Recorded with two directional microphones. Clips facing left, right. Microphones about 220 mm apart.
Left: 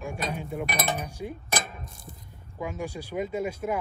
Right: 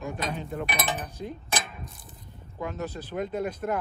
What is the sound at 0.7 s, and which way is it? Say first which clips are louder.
Speech: left 2 dB; 45° left (ahead or behind).